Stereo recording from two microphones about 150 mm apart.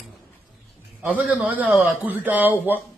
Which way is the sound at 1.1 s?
10° right (ahead or behind).